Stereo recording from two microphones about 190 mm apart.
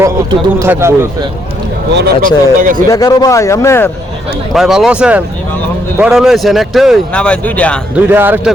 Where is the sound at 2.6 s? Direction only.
45° right (ahead or behind).